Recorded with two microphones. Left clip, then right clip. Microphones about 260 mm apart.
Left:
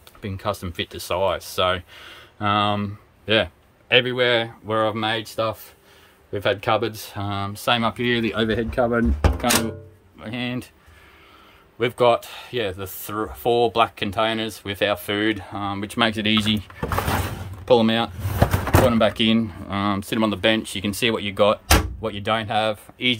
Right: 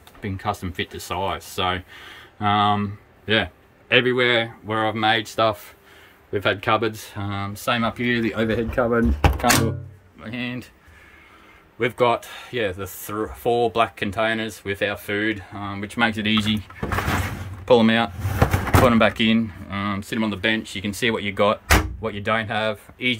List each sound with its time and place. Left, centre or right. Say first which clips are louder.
0.2 s speech: even; centre
11.8 s speech: left 2 dB; centre
17.6 s speech: right 1 dB; centre